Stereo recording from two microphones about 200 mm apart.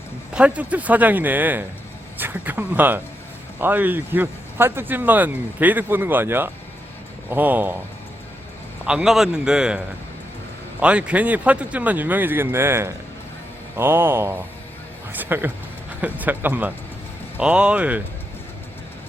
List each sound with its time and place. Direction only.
0.3 s speech: 5° right (ahead or behind)
8.9 s a man's voice: 5° right (ahead or behind)